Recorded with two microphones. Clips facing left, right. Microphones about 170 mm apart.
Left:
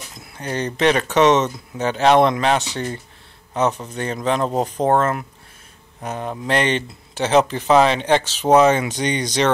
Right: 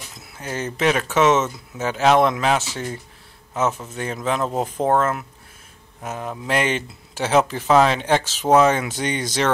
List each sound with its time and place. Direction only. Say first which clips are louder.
0.2 s speech: left 3 dB; 5° right (ahead or behind)